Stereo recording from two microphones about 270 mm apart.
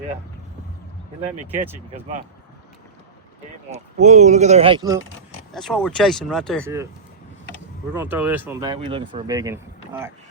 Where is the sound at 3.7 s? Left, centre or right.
Right.